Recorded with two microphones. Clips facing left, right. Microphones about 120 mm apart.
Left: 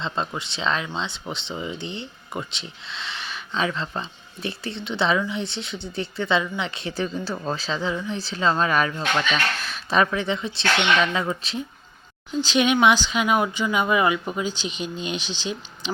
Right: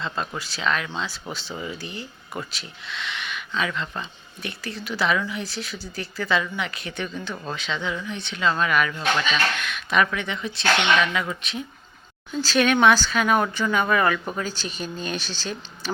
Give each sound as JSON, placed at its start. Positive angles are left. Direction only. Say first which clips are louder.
{"t": 0.0, "sound": "speech", "louder": "left 2 dB", "side_deg": 25}